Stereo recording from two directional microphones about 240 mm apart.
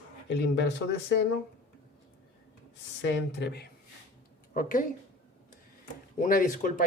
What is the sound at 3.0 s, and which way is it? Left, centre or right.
Speech, left.